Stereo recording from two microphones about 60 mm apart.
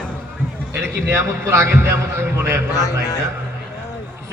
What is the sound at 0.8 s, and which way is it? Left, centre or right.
A man's voice, right.